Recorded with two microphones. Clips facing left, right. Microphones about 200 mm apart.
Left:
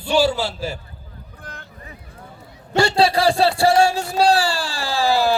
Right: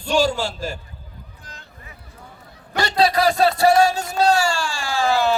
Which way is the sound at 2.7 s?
30° left (ahead or behind).